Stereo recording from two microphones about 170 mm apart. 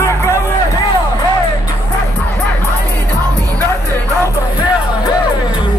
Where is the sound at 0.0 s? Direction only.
15° left (ahead or behind).